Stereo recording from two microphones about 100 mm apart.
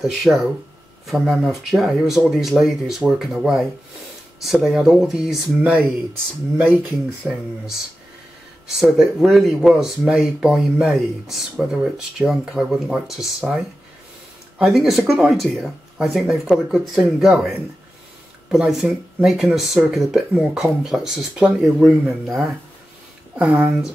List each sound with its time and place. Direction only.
0.0 s speech: 5° right (ahead or behind)
8.7 s speech: 5° right (ahead or behind)
23.3 s speech: 15° right (ahead or behind)